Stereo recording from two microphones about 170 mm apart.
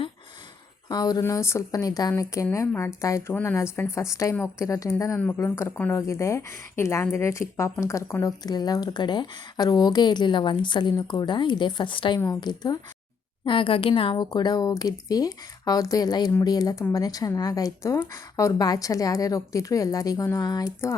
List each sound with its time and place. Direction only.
0.9 s a woman's voice: 25° left (ahead or behind)